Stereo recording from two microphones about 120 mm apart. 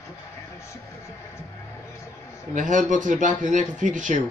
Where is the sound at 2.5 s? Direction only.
90° right.